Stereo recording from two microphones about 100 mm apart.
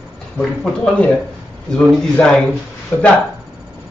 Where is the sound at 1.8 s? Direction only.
5° left (ahead or behind).